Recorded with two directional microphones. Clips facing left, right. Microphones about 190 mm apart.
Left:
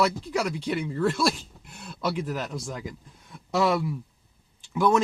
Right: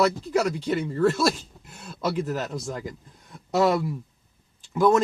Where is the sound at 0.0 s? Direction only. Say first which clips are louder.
Right 3 dB; 45° right (ahead or behind).